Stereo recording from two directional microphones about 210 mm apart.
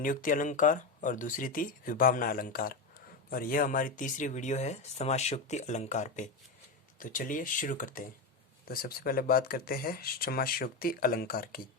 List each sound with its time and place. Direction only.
0.0 s speech: 40° left (ahead or behind)